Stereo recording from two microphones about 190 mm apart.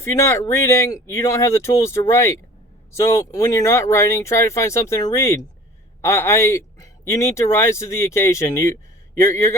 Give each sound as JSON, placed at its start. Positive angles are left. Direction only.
{"t": 0.0, "sound": "speech", "side_deg": 15}